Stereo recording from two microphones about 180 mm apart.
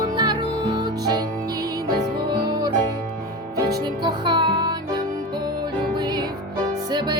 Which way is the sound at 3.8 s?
25° right (ahead or behind).